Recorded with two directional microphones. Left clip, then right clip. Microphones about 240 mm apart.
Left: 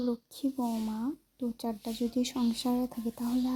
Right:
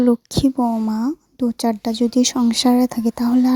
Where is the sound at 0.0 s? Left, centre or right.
Right.